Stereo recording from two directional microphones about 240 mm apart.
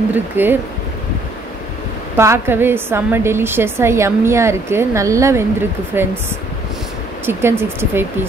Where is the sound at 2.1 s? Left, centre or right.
Centre.